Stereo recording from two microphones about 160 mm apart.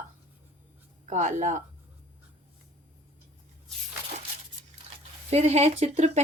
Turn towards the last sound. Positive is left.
turn(degrees=-45)  # may be behind; listen again after turning